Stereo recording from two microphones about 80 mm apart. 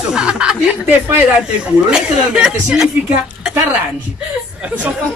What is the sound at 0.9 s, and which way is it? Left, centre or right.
Speech, right.